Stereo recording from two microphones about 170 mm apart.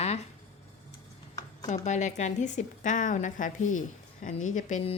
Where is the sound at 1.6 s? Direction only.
45° left (ahead or behind).